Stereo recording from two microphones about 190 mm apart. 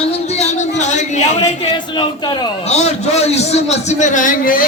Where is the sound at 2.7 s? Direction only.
35° left (ahead or behind).